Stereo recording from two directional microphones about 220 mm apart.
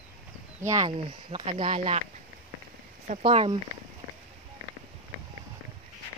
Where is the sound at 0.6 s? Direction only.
15° right (ahead or behind).